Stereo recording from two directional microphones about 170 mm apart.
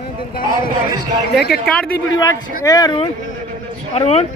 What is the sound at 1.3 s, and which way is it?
Speech, 70° left (ahead or behind).